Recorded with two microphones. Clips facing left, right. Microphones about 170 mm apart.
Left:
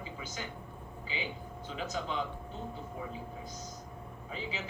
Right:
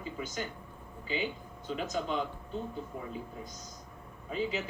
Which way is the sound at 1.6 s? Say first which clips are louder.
Right 4 dB; 50° right (ahead or behind).